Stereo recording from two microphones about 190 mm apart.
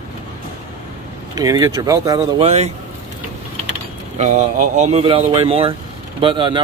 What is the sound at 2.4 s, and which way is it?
Speech, 35° right (ahead or behind).